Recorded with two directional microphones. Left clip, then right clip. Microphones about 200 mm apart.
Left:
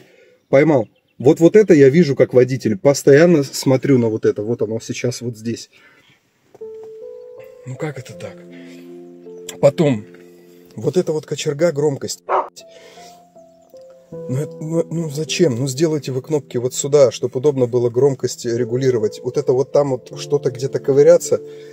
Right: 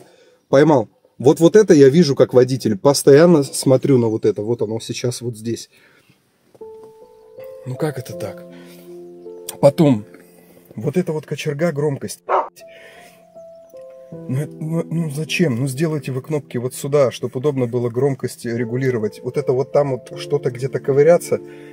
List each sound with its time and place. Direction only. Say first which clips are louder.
0.5 s speech: even; 10° left (ahead or behind)
7.6 s speech: right 4 dB; 30° right (ahead or behind)
9.5 s speech: right 1 dB; 10° right (ahead or behind)
10.8 s speech: left 3 dB; centre (ahead or behind)
14.3 s speech: left 4 dB; centre (ahead or behind)